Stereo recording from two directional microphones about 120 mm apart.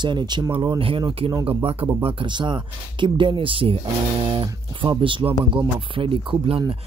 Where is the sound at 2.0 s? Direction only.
40° right (ahead or behind).